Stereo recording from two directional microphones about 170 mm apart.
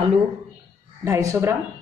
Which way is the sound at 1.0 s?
15° right (ahead or behind).